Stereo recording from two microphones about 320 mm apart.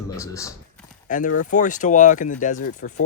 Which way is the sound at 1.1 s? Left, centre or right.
Left.